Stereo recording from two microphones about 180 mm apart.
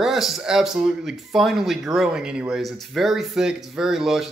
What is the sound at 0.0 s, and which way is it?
Speech, centre (ahead or behind).